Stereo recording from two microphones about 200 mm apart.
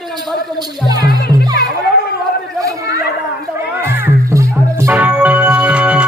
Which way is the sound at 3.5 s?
10° right (ahead or behind).